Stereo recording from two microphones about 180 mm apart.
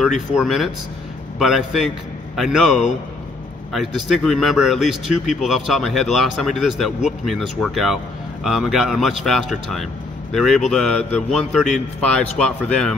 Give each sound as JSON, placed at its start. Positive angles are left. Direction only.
{"t": 0.4, "sound": "speech", "side_deg": 0}